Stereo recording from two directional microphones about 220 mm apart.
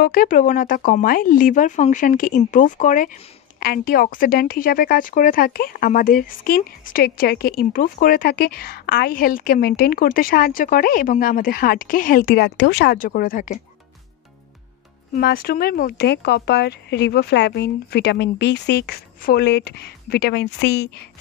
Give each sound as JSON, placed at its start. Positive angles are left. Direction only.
{"t": 0.0, "sound": "a woman's voice", "side_deg": 40}
{"t": 15.1, "sound": "speech", "side_deg": 40}